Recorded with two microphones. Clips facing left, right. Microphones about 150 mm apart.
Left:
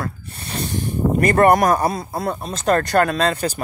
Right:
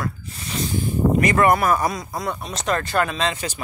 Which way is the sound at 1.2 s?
50° left (ahead or behind).